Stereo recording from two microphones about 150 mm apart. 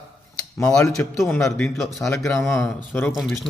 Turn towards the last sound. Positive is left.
turn(degrees=0)  # may be behind; listen again after turning